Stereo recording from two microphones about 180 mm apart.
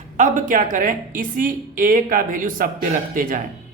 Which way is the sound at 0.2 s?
45° right (ahead or behind).